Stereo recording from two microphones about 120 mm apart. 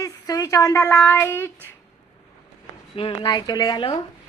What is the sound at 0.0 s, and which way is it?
A woman's voice, 30° left (ahead or behind).